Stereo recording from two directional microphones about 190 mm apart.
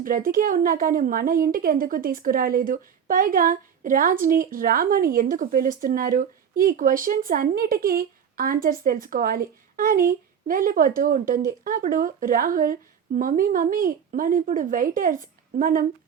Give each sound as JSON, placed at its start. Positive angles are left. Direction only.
{"t": 0.0, "sound": "a woman's voice", "side_deg": -50}